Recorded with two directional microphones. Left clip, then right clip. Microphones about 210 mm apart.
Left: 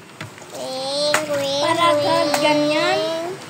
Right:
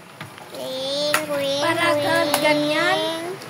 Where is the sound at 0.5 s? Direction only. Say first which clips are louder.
Left 2 dB; 15° right (ahead or behind).